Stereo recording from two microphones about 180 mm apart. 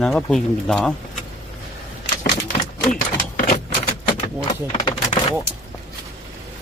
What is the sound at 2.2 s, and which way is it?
Typewriter, 50° left (ahead or behind).